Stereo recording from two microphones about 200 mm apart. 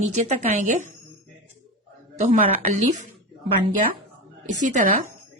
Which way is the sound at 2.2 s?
35° right (ahead or behind).